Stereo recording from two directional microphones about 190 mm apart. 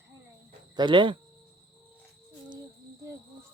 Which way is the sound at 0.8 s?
25° right (ahead or behind).